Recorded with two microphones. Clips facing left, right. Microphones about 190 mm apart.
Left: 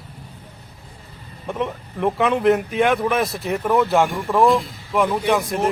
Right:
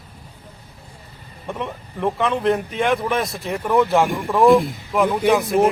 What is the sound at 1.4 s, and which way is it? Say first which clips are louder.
Speech: left 3 dB; centre (ahead or behind).